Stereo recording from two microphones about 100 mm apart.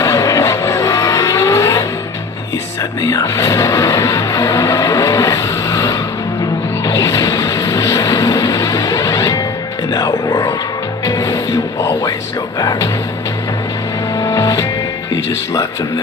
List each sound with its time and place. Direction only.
0.0 s vehicle: 35° left (ahead or behind)
3.0 s music: 35° left (ahead or behind)
12.5 s speech: 40° left (ahead or behind)
14.1 s music: 35° left (ahead or behind)